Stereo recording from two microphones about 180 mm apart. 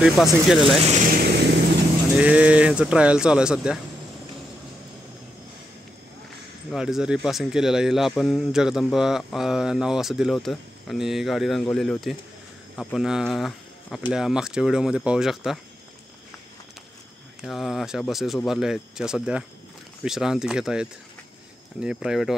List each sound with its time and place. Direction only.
0.0 s speech: centre (ahead or behind)
0.8 s vehicle: 45° right (ahead or behind)
2.1 s speech: 5° right (ahead or behind)
6.7 s speech: 5° right (ahead or behind)
17.4 s speech: centre (ahead or behind)